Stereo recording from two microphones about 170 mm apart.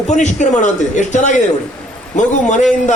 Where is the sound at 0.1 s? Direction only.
45° left (ahead or behind).